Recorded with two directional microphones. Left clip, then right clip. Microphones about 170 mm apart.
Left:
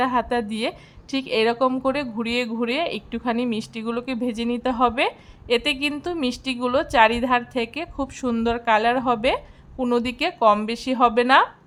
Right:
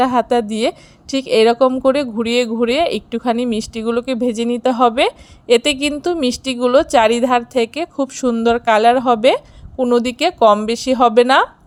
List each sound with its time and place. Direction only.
0.0 s a woman's voice: 30° right (ahead or behind)